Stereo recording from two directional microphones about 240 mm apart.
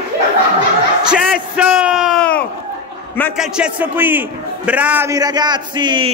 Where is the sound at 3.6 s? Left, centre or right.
Centre.